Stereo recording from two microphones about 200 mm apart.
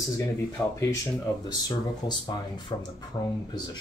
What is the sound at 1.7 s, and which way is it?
Speech, 20° left (ahead or behind).